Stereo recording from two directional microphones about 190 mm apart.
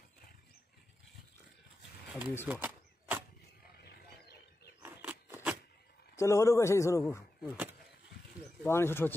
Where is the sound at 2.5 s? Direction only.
10° right (ahead or behind).